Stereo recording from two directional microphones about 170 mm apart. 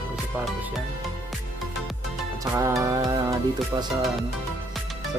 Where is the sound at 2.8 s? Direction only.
20° right (ahead or behind).